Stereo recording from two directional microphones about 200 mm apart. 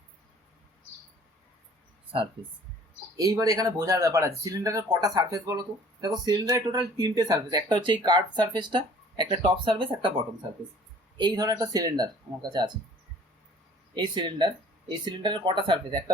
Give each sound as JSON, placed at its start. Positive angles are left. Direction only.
{"t": 3.2, "sound": "speech", "side_deg": -20}
{"t": 11.2, "sound": "speech", "side_deg": -20}
{"t": 13.9, "sound": "speech", "side_deg": -20}